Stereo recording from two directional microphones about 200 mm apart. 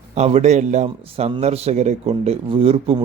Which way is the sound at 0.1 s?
30° right (ahead or behind).